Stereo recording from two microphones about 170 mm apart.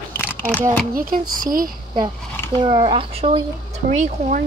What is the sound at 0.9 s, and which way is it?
Speech, 55° right (ahead or behind).